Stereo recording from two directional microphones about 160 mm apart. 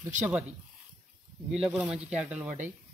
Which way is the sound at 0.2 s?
10° right (ahead or behind).